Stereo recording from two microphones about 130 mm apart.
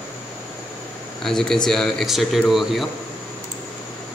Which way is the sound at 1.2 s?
5° left (ahead or behind).